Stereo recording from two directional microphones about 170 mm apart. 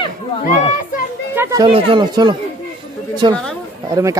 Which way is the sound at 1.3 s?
15° right (ahead or behind).